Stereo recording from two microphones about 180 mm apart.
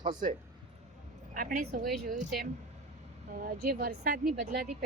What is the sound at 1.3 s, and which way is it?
Speech, 50° right (ahead or behind).